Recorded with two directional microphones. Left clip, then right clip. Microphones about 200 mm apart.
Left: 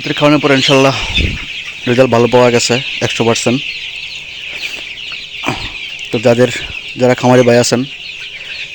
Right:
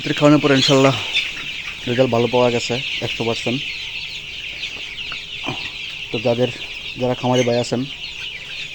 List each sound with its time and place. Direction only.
0.0 s speech: 15° left (ahead or behind)
1.9 s speech: 35° left (ahead or behind)
6.1 s speech: 45° left (ahead or behind)